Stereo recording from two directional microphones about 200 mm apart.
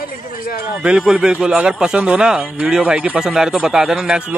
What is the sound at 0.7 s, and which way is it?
Speech, 5° right (ahead or behind).